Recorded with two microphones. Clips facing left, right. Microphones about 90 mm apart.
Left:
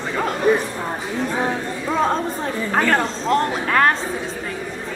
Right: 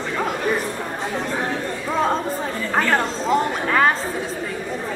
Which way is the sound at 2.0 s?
Centre (ahead or behind).